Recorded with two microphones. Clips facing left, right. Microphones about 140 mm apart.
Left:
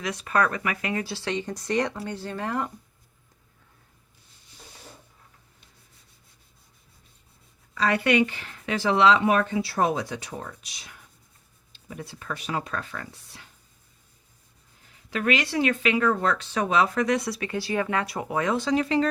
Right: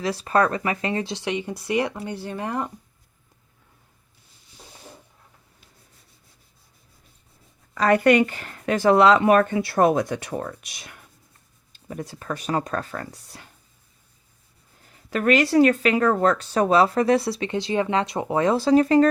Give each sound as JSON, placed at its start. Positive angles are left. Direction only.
{"t": 0.0, "sound": "speech", "side_deg": -30}
{"t": 7.8, "sound": "speech", "side_deg": -45}
{"t": 11.7, "sound": "speech", "side_deg": -45}
{"t": 15.1, "sound": "speech", "side_deg": -45}